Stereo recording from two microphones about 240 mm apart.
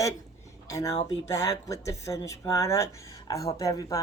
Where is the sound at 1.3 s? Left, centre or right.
Centre.